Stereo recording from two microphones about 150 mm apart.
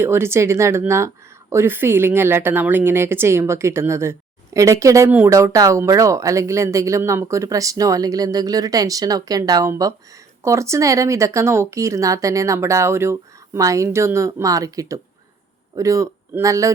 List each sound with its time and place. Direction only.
0.0 s speech: 15° right (ahead or behind)